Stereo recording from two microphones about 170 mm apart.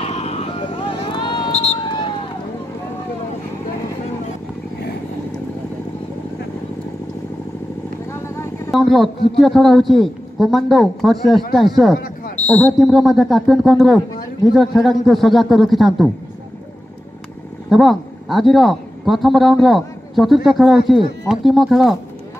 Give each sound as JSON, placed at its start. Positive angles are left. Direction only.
{"t": 0.0, "sound": "vehicle", "side_deg": 35}
{"t": 1.5, "sound": "a sound", "side_deg": 40}
{"t": 1.8, "sound": "run", "side_deg": 25}
{"t": 8.1, "sound": "vehicle", "side_deg": 15}
{"t": 8.7, "sound": "a man's voice", "side_deg": 0}
{"t": 17.6, "sound": "a man's voice", "side_deg": 0}